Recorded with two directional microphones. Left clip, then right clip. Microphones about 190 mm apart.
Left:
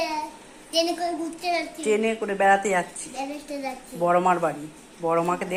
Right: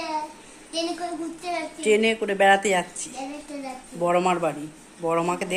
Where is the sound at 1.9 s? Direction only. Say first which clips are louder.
Right 4 dB; 20° right (ahead or behind).